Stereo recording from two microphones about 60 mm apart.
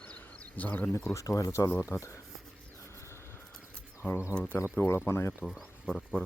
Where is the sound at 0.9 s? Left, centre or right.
Left.